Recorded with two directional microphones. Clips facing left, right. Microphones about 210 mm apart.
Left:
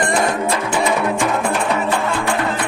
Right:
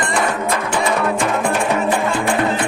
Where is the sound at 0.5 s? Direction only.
5° left (ahead or behind).